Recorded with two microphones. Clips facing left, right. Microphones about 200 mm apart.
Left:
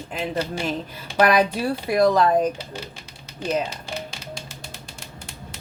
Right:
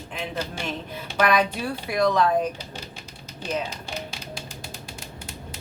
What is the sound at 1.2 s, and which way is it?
A woman's voice, 35° left (ahead or behind).